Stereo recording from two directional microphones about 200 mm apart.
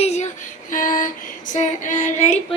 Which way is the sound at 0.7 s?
40° left (ahead or behind).